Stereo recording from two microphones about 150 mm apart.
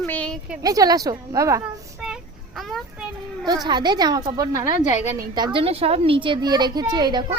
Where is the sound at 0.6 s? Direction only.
25° right (ahead or behind).